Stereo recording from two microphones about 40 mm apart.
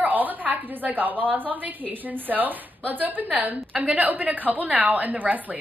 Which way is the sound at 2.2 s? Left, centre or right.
Right.